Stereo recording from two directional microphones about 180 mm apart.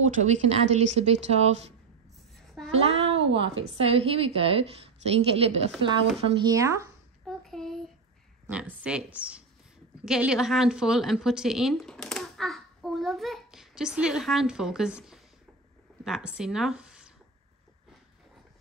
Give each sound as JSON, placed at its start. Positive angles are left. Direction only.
{"t": 0.2, "sound": "a woman's voice", "side_deg": -40}
{"t": 2.3, "sound": "a sound", "side_deg": 0}
{"t": 2.8, "sound": "a child's voice", "side_deg": -35}
{"t": 3.2, "sound": "a woman's voice", "side_deg": -90}
{"t": 3.8, "sound": "a woman's voice", "side_deg": -30}
{"t": 6.4, "sound": "speech", "side_deg": -20}
{"t": 7.2, "sound": "a sound", "side_deg": 0}
{"t": 8.5, "sound": "a woman's voice", "side_deg": -5}